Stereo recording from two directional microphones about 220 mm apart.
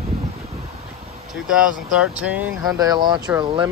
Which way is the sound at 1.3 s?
Centre (ahead or behind).